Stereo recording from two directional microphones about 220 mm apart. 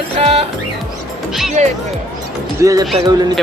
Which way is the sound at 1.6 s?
30° right (ahead or behind).